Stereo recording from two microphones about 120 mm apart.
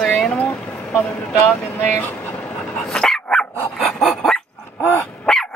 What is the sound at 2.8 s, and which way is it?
Dog, 5° left (ahead or behind).